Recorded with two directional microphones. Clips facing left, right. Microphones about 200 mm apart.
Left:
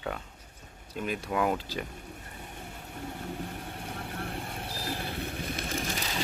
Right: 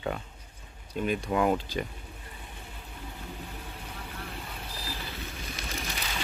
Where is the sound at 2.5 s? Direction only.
50° left (ahead or behind).